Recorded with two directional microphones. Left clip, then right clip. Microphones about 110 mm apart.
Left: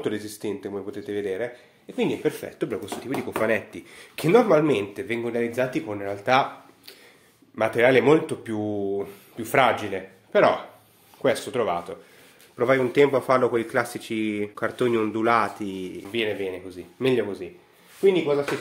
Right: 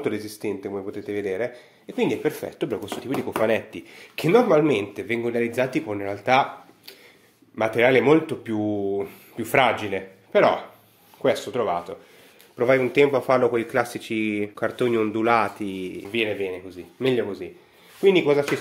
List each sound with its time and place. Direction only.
0.0 s speech: 10° right (ahead or behind)
7.5 s speech: 10° right (ahead or behind)
11.2 s speech: centre (ahead or behind)
12.5 s speech: 5° right (ahead or behind)
18.0 s speech: 75° right (ahead or behind)